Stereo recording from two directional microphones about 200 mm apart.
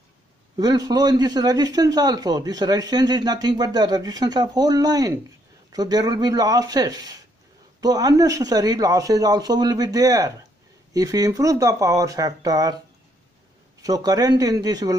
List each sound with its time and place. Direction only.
0.6 s a man's voice: 20° right (ahead or behind)
13.8 s a man's voice: 20° right (ahead or behind)